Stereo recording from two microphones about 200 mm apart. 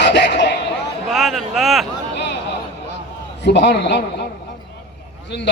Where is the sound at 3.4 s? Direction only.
60° left (ahead or behind).